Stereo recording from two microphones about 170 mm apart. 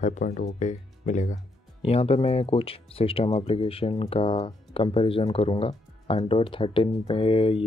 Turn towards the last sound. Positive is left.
turn(degrees=35)  # may be behind; listen again after turning